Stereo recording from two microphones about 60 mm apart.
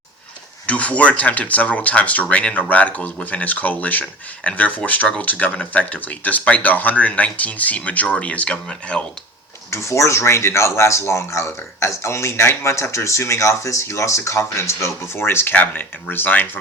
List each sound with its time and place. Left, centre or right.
0.7 s speech: left
9.6 s speech: left
15.5 s speech: left